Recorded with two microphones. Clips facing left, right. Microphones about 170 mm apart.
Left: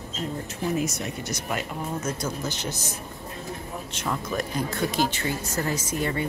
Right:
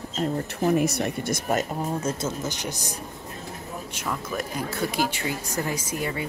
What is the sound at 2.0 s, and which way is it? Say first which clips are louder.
Speech: right 2 dB; 25° right (ahead or behind).